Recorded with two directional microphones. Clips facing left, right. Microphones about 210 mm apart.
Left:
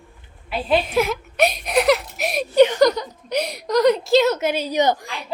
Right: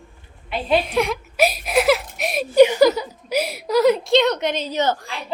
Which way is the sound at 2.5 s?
10° right (ahead or behind).